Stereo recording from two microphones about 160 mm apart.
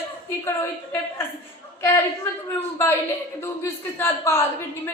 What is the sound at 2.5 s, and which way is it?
A woman's voice, 15° left (ahead or behind).